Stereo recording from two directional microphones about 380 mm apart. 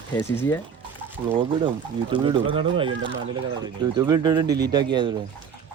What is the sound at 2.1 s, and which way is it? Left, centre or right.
Speech, centre.